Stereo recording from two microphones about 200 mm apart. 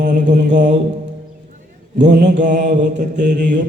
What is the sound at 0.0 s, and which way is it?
Mantra, 40° right (ahead or behind).